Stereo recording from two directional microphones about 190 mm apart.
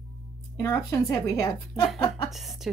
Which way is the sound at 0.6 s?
15° left (ahead or behind).